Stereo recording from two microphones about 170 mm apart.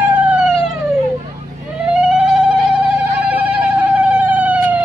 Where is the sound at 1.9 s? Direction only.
5° right (ahead or behind).